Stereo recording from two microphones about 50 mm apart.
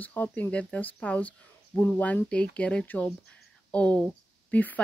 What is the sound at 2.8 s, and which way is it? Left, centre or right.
Speech, left.